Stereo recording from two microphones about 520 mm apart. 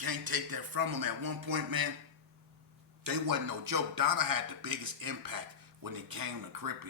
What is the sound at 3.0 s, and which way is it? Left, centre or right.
Speech, right.